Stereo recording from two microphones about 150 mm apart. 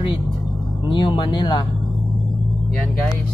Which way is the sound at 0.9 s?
30° left (ahead or behind).